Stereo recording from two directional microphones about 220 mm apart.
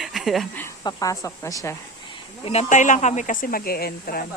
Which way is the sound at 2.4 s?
30° left (ahead or behind).